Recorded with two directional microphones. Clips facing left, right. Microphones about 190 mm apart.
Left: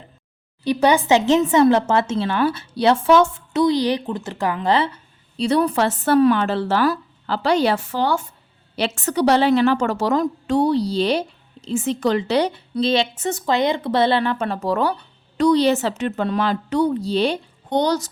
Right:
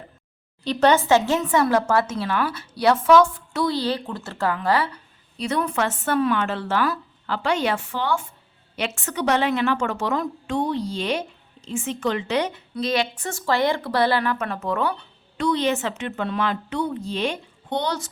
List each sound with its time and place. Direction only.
0.6 s speech: 10° left (ahead or behind)
5.4 s a woman's voice: 30° left (ahead or behind)